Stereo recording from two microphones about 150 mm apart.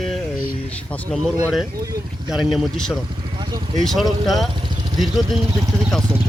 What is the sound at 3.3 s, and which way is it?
Vehicle, 30° right (ahead or behind).